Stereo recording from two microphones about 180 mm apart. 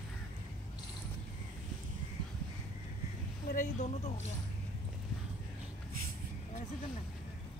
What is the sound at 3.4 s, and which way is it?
Speech, 45° left (ahead or behind).